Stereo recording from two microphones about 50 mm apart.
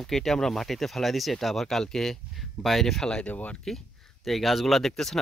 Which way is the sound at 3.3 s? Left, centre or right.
Left.